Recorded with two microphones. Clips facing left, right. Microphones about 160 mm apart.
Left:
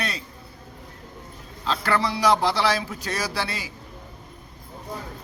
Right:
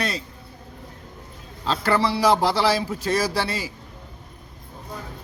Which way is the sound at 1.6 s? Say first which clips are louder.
Right 3 dB; 35° right (ahead or behind).